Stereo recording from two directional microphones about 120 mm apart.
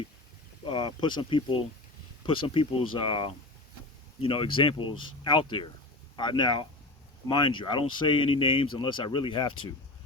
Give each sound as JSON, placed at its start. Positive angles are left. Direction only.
{"t": 0.6, "sound": "speech", "side_deg": 40}